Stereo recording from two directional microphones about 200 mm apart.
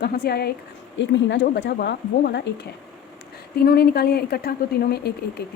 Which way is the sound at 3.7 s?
50° left (ahead or behind).